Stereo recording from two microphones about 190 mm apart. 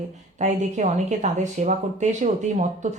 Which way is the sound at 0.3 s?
40° right (ahead or behind).